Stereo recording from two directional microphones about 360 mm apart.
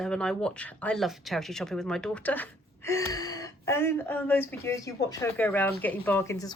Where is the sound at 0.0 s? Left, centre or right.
Centre.